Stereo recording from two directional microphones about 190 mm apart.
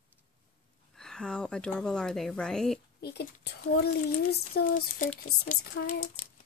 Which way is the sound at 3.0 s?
60° left (ahead or behind).